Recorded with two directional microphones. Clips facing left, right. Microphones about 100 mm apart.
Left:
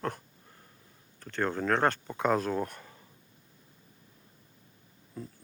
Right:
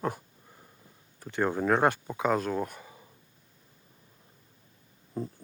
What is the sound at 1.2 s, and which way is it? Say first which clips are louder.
Speech: right 3 dB; 10° right (ahead or behind).